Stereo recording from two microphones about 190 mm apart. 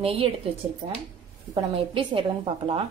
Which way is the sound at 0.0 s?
30° right (ahead or behind).